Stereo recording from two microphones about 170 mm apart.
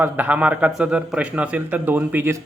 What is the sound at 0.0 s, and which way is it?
A man's voice, 10° right (ahead or behind).